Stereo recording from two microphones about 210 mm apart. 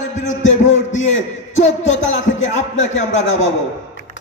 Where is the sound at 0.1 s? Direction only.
35° left (ahead or behind).